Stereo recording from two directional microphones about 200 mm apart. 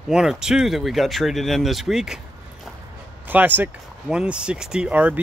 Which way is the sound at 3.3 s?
10° right (ahead or behind).